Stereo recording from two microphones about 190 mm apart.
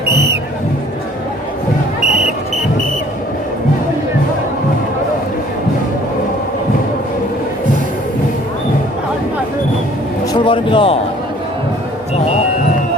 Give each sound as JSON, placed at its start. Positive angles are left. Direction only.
{"t": 10.3, "sound": "a man's voice", "side_deg": 25}